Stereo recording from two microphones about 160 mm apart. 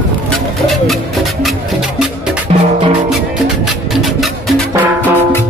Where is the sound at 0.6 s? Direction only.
Centre (ahead or behind).